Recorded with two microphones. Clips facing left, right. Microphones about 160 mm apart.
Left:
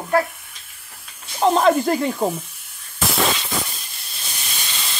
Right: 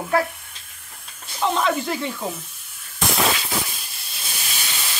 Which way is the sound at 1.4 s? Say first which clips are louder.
Left 6 dB; 40° left (ahead or behind).